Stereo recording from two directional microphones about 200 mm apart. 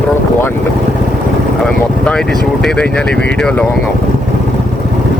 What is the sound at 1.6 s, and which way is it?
Speech, 5° left (ahead or behind).